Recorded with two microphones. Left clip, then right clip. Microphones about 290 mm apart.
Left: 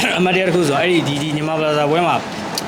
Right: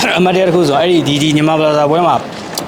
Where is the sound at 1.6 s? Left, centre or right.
Centre.